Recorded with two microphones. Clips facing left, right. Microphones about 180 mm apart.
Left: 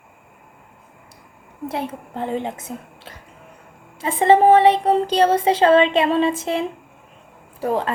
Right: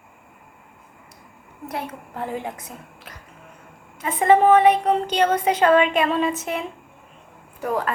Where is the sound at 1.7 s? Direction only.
25° left (ahead or behind).